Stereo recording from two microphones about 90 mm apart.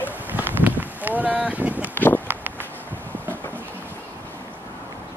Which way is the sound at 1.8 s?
20° left (ahead or behind).